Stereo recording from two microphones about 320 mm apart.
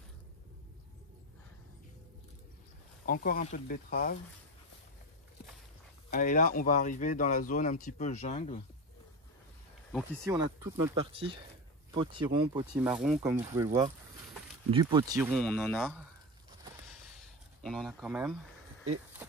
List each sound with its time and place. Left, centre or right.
3.1 s speech: left
6.0 s speech: left
10.2 s speech: centre
14.7 s speech: centre
17.6 s speech: centre